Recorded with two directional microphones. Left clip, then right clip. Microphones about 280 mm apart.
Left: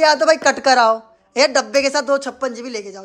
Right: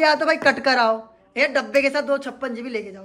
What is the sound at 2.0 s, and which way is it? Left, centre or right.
Speech, centre.